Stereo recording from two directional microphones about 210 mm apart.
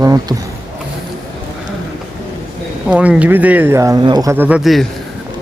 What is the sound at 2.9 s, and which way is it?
Speech, 5° right (ahead or behind).